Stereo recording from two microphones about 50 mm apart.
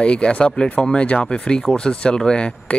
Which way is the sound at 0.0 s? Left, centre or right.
Left.